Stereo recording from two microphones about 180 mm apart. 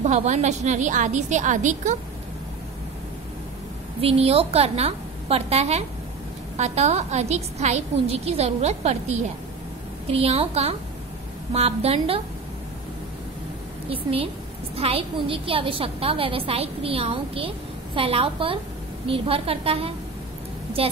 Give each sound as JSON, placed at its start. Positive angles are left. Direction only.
{"t": 0.0, "sound": "a woman's voice", "side_deg": -40}
{"t": 4.0, "sound": "a woman's voice", "side_deg": -35}
{"t": 13.8, "sound": "a woman's voice", "side_deg": -30}